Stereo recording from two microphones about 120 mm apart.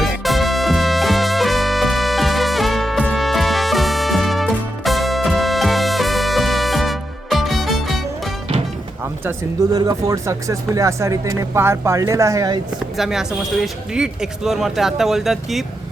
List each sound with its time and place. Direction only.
0.0 s music: centre (ahead or behind)
9.7 s speech: 30° right (ahead or behind)
13.0 s speech: centre (ahead or behind)